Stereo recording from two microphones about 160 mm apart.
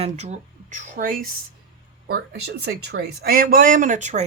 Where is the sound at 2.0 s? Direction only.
90° right.